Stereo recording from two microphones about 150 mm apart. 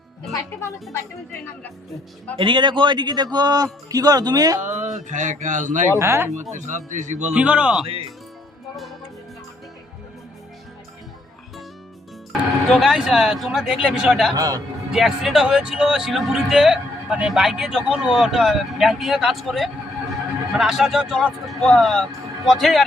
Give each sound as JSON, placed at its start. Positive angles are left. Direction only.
{"t": 0.9, "sound": "a woman's voice", "side_deg": 15}
{"t": 2.4, "sound": "a man's voice", "side_deg": -30}
{"t": 4.7, "sound": "speech", "side_deg": -55}
{"t": 6.0, "sound": "a man's voice", "side_deg": -15}
{"t": 6.3, "sound": "speech", "side_deg": -55}
{"t": 7.3, "sound": "a man's voice", "side_deg": -10}
{"t": 12.7, "sound": "speech", "side_deg": 0}
{"t": 14.3, "sound": "speech", "side_deg": -25}
{"t": 14.9, "sound": "speech", "side_deg": 0}